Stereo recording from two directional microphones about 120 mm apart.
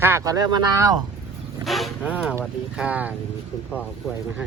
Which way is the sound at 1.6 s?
Centre (ahead or behind).